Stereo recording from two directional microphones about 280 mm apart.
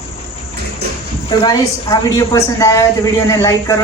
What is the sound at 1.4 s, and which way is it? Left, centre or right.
Speech, centre.